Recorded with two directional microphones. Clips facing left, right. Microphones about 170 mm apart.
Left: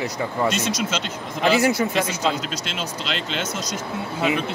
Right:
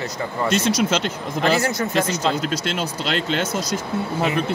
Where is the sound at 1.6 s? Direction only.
10° left (ahead or behind).